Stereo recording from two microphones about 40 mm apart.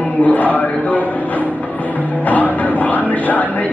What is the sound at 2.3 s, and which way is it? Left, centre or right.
Speech, left.